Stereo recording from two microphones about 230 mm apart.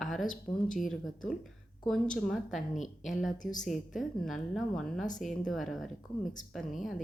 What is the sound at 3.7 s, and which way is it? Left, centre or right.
A woman's voice, centre.